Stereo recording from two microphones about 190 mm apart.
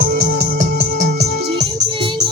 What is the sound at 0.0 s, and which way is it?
Music, 50° right (ahead or behind).